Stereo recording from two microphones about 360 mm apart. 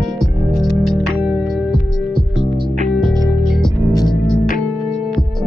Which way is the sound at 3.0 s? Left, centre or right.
Centre.